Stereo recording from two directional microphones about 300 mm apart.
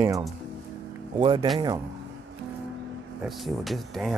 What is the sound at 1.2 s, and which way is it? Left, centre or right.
Speech, centre.